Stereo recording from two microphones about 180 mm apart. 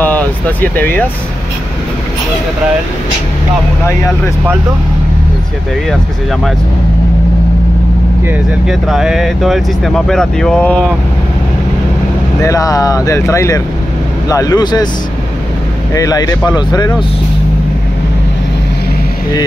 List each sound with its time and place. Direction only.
0.0 s speech: 10° left (ahead or behind)
8.3 s speech: centre (ahead or behind)
12.4 s speech: 20° left (ahead or behind)
15.9 s speech: 20° left (ahead or behind)